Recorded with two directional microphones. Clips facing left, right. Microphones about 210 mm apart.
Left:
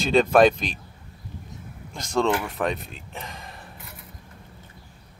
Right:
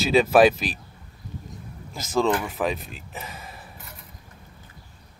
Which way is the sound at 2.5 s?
Centre (ahead or behind).